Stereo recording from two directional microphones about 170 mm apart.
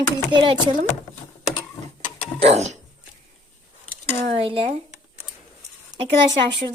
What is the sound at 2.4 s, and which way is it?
Speech, 40° right (ahead or behind).